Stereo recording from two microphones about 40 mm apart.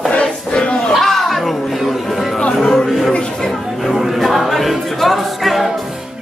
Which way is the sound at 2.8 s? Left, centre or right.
Centre.